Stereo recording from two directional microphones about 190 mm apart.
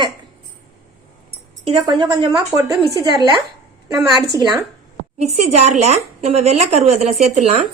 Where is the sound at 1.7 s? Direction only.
25° right (ahead or behind).